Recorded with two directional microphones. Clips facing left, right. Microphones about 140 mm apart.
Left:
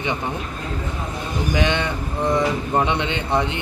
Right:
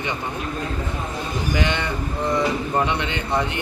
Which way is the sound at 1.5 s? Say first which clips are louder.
Left 3 dB; 20° left (ahead or behind).